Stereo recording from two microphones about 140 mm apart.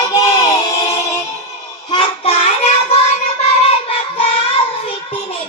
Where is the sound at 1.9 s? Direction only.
40° left (ahead or behind).